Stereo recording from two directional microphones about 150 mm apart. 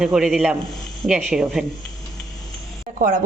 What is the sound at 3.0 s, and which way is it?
Speech, 65° right (ahead or behind).